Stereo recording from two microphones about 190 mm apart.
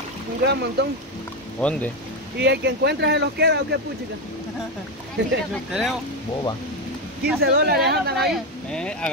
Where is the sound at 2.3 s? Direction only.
60° right (ahead or behind).